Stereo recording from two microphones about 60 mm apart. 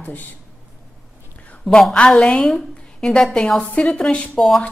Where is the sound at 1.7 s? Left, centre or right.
Centre.